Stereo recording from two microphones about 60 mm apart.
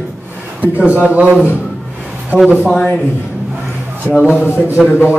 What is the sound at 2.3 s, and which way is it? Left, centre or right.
Speech, left.